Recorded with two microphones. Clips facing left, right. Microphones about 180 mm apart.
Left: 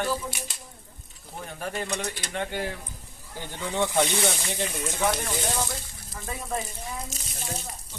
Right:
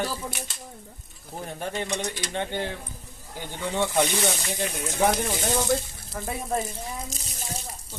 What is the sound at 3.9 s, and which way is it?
Speech, 5° right (ahead or behind).